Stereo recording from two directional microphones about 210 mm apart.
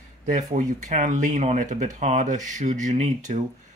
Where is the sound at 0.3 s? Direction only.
35° right (ahead or behind).